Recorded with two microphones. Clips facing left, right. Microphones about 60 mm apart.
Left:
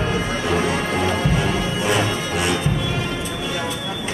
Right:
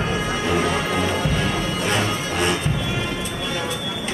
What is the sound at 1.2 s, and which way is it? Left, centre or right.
Music, centre.